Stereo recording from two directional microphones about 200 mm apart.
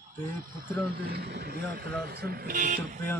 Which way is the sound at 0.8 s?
50° right (ahead or behind).